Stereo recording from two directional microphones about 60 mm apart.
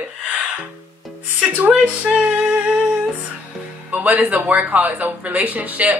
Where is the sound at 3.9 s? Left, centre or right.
Right.